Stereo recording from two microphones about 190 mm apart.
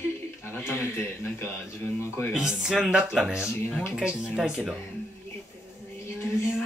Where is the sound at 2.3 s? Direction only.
5° right (ahead or behind).